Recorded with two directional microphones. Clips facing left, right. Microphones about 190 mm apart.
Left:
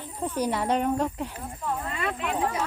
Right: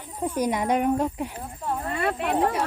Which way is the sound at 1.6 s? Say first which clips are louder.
Right 4 dB; 35° right (ahead or behind).